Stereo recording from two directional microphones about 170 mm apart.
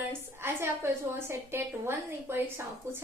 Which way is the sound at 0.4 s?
15° right (ahead or behind).